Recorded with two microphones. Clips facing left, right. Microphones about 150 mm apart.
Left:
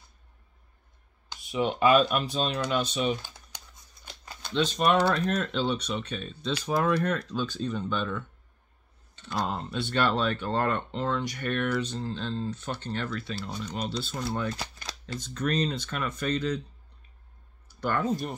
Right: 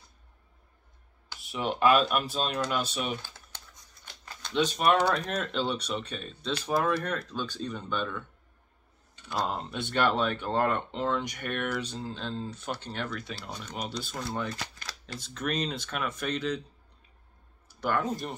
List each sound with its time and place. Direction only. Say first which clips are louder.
1.5 s speech: left 2 dB; centre (ahead or behind)
3.2 s typing: left 1 dB; 15° left (ahead or behind)
4.6 s speech: left 1 dB; 10° right (ahead or behind)
7.7 s speech: left 3 dB; 10° right (ahead or behind)
9.2 s speech: even; 10° right (ahead or behind)
14.2 s speech: left 2 dB; centre (ahead or behind)
17.8 s speech: left 2 dB; 5° right (ahead or behind)